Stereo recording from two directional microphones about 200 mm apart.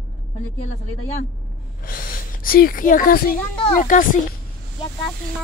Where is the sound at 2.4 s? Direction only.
45° left (ahead or behind).